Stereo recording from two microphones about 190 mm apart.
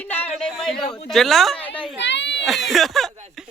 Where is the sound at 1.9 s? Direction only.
70° left (ahead or behind).